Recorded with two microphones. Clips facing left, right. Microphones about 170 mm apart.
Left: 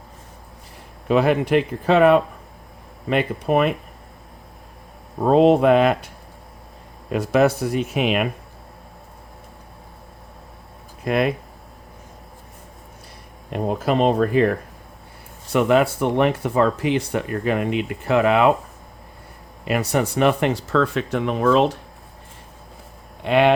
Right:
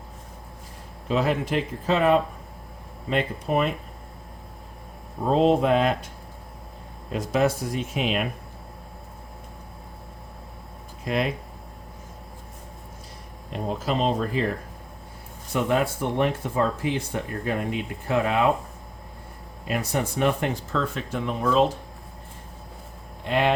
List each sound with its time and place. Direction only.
1.0 s speech: 65° left (ahead or behind)
5.2 s speech: 65° left (ahead or behind)
7.1 s speech: 65° left (ahead or behind)
11.0 s speech: 60° left (ahead or behind)
13.5 s speech: 60° left (ahead or behind)
15.5 s speech: 75° left (ahead or behind)
19.6 s speech: 75° left (ahead or behind)
23.2 s speech: 70° left (ahead or behind)